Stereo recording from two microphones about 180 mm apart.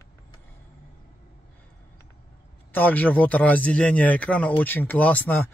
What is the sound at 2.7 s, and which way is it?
Speech, 10° left (ahead or behind).